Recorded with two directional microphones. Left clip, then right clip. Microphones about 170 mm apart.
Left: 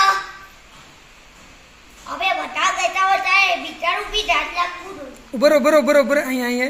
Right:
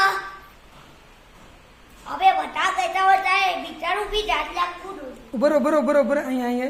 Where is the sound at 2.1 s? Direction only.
20° right (ahead or behind).